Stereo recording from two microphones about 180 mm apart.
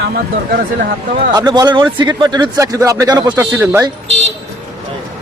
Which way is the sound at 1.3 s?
20° right (ahead or behind).